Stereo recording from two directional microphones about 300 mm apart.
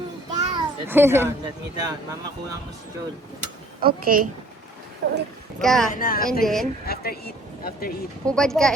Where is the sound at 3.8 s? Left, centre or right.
Right.